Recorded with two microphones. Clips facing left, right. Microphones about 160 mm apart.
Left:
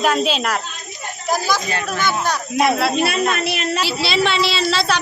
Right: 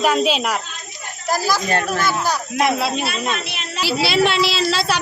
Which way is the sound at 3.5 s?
60° left (ahead or behind).